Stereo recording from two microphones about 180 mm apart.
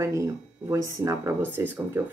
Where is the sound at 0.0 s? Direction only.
15° right (ahead or behind).